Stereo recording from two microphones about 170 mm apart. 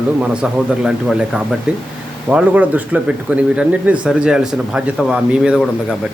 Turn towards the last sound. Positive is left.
turn(degrees=-5)  # may be behind; listen again after turning